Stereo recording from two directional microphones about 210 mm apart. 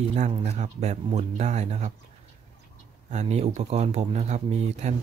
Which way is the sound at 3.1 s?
30° right (ahead or behind).